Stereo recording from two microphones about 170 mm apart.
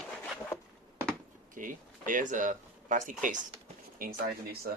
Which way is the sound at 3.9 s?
60° right (ahead or behind).